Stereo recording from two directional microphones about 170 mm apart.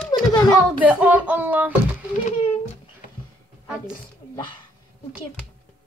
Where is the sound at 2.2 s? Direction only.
40° left (ahead or behind).